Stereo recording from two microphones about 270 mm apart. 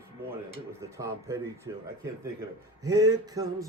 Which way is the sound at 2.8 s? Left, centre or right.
Centre.